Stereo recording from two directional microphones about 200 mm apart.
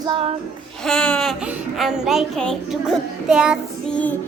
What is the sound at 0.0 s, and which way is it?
Music, 25° right (ahead or behind).